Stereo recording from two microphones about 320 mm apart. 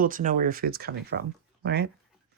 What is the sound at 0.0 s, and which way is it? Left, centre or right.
Speech, right.